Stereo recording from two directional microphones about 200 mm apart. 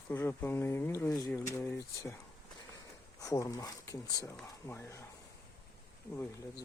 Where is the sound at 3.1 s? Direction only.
15° left (ahead or behind).